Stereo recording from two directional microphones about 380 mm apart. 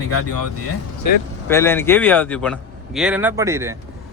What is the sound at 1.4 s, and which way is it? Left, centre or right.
A man's voice, centre.